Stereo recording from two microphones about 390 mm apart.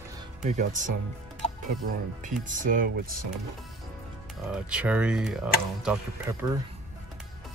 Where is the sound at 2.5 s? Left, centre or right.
Centre.